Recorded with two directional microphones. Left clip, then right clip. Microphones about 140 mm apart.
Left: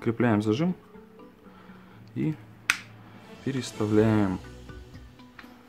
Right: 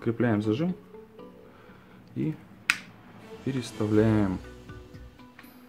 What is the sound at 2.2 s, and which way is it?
Speech, 20° left (ahead or behind).